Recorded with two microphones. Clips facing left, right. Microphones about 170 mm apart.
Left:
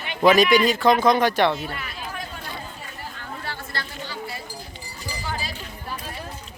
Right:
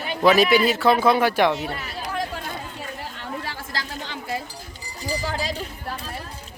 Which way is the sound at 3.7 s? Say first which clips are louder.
Right 2 dB; 90° right.